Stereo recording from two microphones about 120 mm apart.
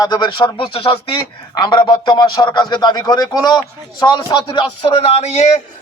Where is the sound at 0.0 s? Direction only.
35° left (ahead or behind); by 5.5 s 65° left (ahead or behind).